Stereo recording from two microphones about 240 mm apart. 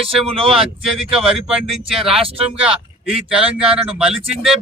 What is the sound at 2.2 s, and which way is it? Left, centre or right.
Speech, right.